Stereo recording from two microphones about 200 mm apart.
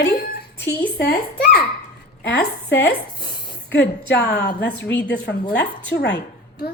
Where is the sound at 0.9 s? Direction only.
55° left (ahead or behind).